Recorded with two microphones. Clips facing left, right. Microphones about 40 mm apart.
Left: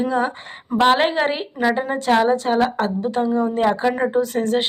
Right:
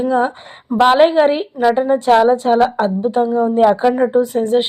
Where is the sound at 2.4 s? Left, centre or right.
Centre.